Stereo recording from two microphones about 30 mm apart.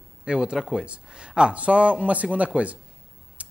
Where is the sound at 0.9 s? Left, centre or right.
Right.